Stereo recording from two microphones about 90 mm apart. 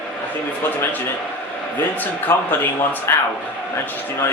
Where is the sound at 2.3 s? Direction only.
35° left (ahead or behind).